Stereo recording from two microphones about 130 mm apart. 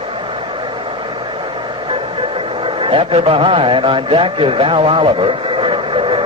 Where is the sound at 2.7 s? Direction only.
45° right (ahead or behind).